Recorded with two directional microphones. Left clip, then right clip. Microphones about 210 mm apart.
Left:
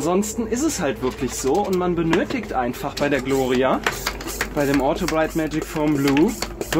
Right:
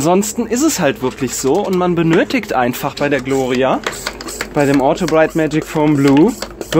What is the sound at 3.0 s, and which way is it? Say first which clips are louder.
Speech: right 4 dB; 30° right (ahead or behind).